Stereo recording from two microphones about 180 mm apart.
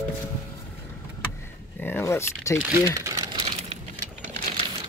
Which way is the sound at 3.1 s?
30° right (ahead or behind).